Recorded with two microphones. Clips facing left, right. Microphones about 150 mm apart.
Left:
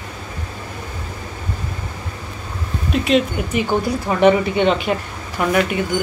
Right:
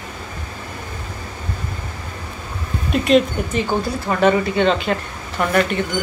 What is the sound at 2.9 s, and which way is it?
Speech, centre (ahead or behind).